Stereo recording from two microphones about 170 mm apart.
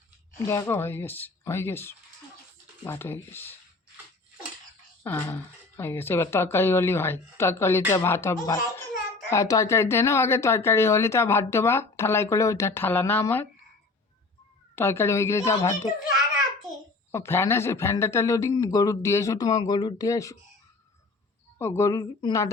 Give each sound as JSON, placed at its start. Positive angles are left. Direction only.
{"t": 0.4, "sound": "speech", "side_deg": 15}
{"t": 5.0, "sound": "speech", "side_deg": 15}
{"t": 14.8, "sound": "speech", "side_deg": 15}
{"t": 17.1, "sound": "speech", "side_deg": 15}
{"t": 21.6, "sound": "a woman's voice", "side_deg": 15}